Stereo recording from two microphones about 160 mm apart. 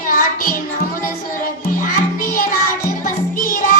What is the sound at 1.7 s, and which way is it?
Music, 60° left (ahead or behind).